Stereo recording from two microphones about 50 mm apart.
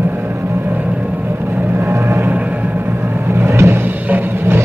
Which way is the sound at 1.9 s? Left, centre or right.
Right.